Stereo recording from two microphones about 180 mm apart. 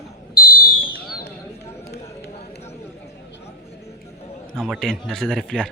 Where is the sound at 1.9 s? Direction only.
65° left (ahead or behind).